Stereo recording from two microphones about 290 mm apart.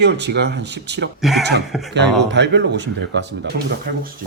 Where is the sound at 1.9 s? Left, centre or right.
Right.